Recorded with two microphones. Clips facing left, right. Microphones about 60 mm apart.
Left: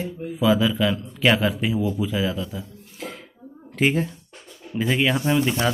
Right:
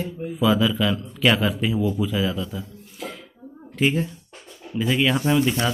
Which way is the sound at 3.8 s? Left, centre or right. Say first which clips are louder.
Left 1 dB; left.